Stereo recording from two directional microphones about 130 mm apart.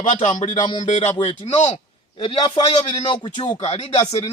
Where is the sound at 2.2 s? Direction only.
40° left (ahead or behind).